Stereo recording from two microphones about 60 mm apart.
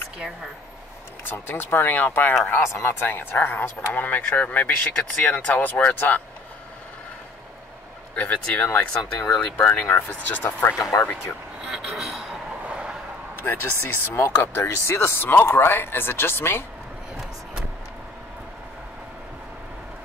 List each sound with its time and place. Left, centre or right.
1.2 s speech: left
8.2 s speech: left
8.6 s speech: left
9.4 s speech: left
10.9 s speech: left
11.7 s a sound: centre
12.6 s vehicle: centre
13.4 s speech: left